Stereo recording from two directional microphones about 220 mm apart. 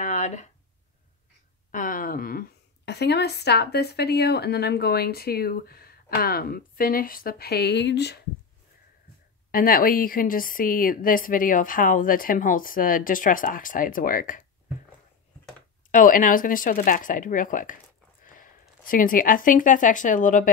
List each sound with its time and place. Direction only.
0.0 s a sound: 35° left (ahead or behind)
1.7 s a woman's voice: 35° left (ahead or behind)
9.5 s a woman's voice: 40° left (ahead or behind)
15.9 s a woman's voice: 35° left (ahead or behind)